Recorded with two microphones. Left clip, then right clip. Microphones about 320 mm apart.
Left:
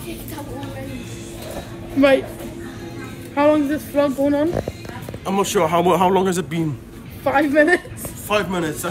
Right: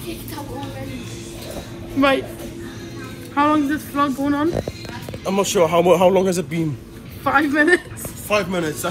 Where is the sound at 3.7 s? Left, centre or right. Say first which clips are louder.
Left 2 dB; right.